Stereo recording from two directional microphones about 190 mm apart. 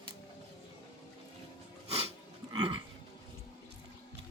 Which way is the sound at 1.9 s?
30° right (ahead or behind).